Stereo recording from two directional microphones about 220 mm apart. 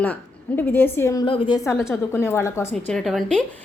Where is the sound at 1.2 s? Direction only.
25° left (ahead or behind).